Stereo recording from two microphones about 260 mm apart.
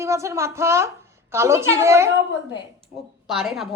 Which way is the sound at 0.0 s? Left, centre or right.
Centre.